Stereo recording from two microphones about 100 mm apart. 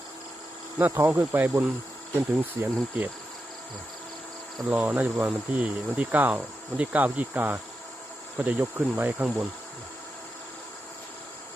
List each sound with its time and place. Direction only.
0.8 s speech: 20° right (ahead or behind)
4.7 s speech: 15° right (ahead or behind)